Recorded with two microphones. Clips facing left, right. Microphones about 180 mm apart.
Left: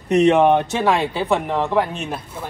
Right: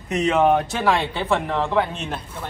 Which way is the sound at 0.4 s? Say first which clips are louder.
Left 3 dB; 25° left (ahead or behind).